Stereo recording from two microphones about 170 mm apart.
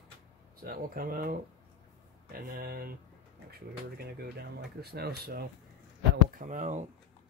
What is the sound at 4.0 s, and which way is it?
Speech, 70° right (ahead or behind).